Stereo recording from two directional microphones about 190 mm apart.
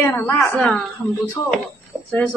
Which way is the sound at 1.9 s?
20° right (ahead or behind).